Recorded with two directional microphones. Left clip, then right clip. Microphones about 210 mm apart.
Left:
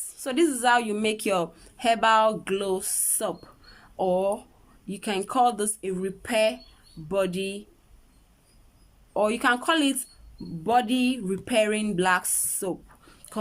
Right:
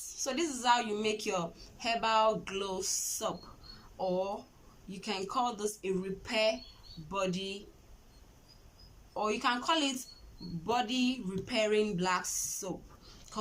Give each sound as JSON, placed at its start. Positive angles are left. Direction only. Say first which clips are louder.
{"t": 0.3, "sound": "a woman's voice", "louder": "left 8 dB", "side_deg": 40}
{"t": 9.1, "sound": "a woman's voice", "louder": "left 9 dB", "side_deg": 45}